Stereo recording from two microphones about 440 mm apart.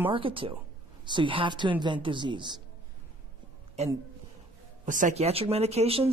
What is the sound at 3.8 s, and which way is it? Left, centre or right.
Speech, centre.